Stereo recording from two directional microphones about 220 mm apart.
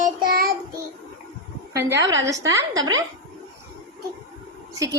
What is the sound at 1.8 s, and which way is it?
A child's voice, 15° right (ahead or behind).